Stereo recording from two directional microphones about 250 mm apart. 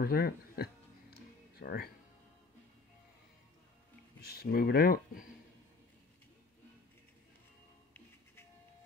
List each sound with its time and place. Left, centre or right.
0.0 s speech: left
1.5 s music: left
4.3 s speech: left